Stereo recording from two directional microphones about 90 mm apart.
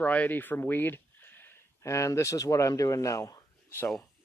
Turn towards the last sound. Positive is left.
turn(degrees=35)  # may be behind; listen again after turning